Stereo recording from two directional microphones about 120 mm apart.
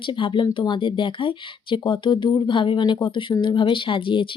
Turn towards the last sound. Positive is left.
turn(degrees=45)  # may be behind; listen again after turning